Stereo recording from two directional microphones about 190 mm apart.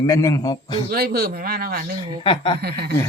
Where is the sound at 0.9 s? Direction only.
55° right (ahead or behind).